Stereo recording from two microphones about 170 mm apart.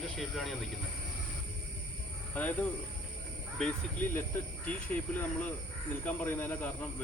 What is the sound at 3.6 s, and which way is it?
Speech, 10° left (ahead or behind).